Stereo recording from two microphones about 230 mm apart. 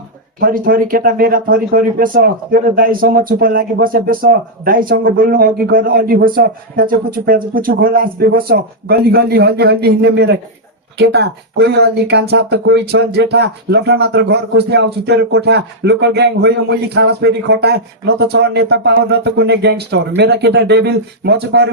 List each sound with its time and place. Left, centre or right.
0.3 s speech: right